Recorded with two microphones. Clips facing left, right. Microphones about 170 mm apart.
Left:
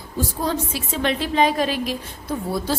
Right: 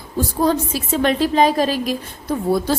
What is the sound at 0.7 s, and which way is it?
A woman's voice, 40° right (ahead or behind).